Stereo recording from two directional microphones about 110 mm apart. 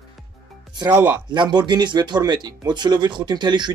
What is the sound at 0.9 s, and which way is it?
Speech, 15° right (ahead or behind).